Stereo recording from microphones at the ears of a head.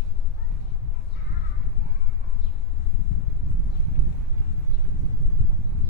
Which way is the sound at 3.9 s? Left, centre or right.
Left.